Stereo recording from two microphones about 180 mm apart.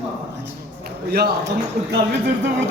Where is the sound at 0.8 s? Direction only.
60° right (ahead or behind).